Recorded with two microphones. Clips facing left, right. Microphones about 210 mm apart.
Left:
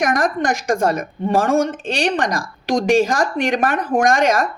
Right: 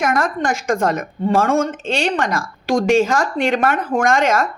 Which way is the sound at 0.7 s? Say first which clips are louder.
Even; 30° left (ahead or behind).